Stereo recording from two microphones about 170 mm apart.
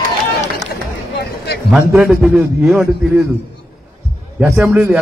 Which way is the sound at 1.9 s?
5° right (ahead or behind).